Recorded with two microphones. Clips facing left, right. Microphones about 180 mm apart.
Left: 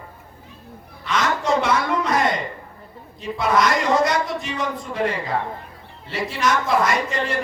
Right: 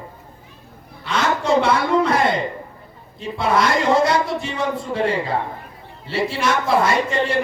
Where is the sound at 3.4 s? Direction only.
30° right (ahead or behind).